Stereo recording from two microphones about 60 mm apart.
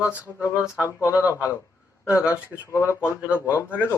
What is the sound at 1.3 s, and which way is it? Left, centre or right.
Speech, left.